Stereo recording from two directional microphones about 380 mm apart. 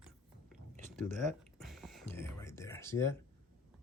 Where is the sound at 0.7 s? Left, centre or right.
Centre.